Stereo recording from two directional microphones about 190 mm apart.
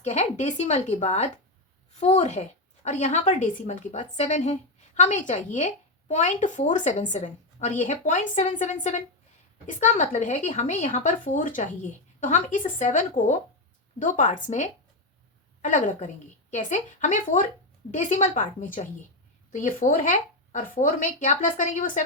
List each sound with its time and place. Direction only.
0.0 s a woman's voice: 35° left (ahead or behind)
15.6 s a woman's voice: 40° left (ahead or behind)